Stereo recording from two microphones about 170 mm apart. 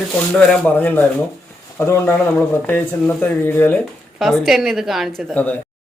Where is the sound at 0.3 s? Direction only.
5° left (ahead or behind).